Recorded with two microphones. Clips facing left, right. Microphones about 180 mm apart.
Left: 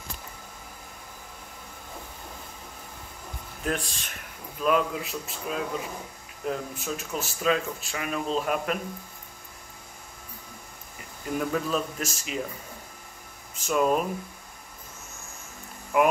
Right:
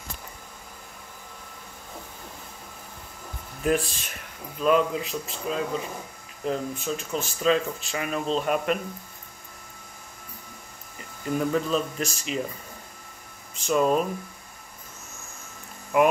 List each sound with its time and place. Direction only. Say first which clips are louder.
3.6 s speech: right 6 dB; 5° right (ahead or behind)
11.3 s speech: right 3 dB; centre (ahead or behind)
13.6 s speech: right 2 dB; 5° left (ahead or behind)
15.9 s speech: right 2 dB; centre (ahead or behind)